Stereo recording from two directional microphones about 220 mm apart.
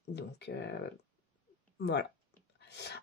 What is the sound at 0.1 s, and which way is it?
Speech, 50° left (ahead or behind).